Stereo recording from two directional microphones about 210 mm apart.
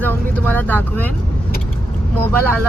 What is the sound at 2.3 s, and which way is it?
Speech, 10° left (ahead or behind).